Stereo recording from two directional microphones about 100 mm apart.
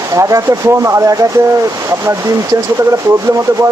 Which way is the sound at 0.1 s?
35° right (ahead or behind).